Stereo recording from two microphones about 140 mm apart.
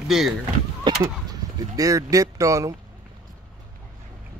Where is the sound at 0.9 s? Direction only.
35° right (ahead or behind).